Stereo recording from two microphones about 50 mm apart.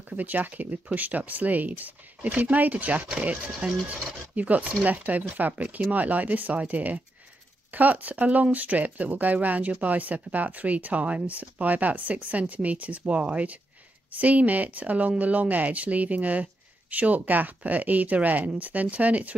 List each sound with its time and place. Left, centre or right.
0.1 s speech: right